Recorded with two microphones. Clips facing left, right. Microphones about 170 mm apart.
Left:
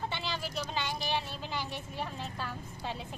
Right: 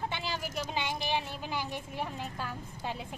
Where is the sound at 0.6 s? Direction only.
15° right (ahead or behind).